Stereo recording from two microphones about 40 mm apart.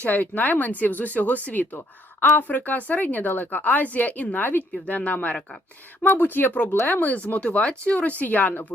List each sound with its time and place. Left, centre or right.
0.0 s a woman's voice: left
6.0 s a woman's voice: left
7.6 s speech: left
7.9 s a woman's voice: left